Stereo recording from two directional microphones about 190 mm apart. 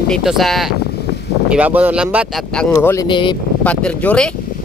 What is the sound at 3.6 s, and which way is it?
Speech, 5° left (ahead or behind).